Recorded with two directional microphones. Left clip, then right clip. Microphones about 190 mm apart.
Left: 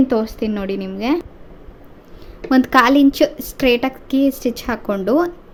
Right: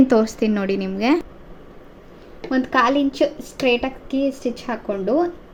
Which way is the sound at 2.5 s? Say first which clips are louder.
Left 5 dB; 35° left (ahead or behind).